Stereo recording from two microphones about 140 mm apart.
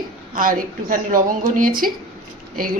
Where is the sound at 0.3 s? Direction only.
85° right.